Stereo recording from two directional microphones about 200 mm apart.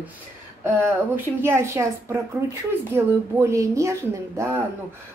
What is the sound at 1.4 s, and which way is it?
Speech, 15° right (ahead or behind).